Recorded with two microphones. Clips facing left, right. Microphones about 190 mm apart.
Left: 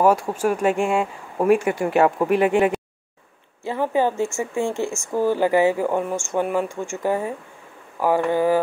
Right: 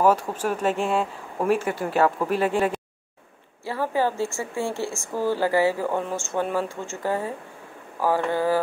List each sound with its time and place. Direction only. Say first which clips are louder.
0.0 s speech: left 3 dB; 10° left (ahead or behind)